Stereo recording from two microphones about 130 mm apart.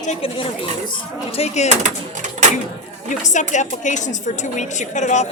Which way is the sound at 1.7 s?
65° right (ahead or behind).